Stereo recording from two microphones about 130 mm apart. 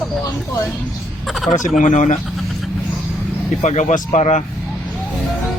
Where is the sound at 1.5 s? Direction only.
75° left (ahead or behind).